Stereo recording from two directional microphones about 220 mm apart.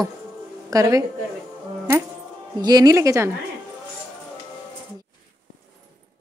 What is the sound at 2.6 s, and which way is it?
Speech, 15° right (ahead or behind).